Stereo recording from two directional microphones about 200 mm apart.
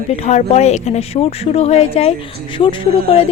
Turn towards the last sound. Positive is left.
turn(degrees=30)  # may be behind; listen again after turning